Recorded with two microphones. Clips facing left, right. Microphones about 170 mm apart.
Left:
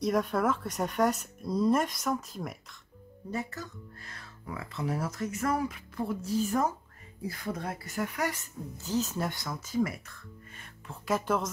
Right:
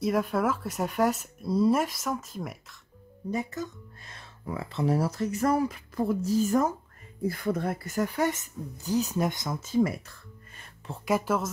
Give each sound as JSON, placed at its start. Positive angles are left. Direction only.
{"t": 0.0, "sound": "speech", "side_deg": -5}
{"t": 3.3, "sound": "speech", "side_deg": -20}
{"t": 8.2, "sound": "speech", "side_deg": -20}
{"t": 11.1, "sound": "speech", "side_deg": -5}